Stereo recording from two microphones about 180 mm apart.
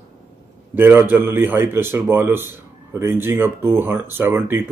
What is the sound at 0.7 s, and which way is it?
Speech, 10° right (ahead or behind).